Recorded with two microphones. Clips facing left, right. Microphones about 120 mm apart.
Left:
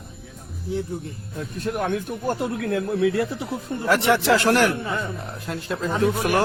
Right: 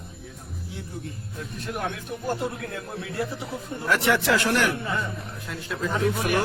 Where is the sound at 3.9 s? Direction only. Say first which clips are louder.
Left 4 dB; 30° left (ahead or behind).